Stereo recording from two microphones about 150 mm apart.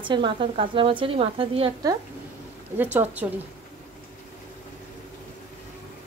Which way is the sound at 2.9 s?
10° right (ahead or behind).